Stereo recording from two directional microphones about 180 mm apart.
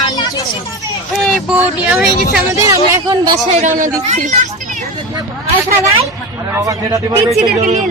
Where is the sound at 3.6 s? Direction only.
45° right (ahead or behind).